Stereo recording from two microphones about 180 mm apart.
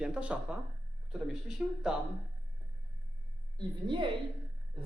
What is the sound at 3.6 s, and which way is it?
Speech, 25° right (ahead or behind).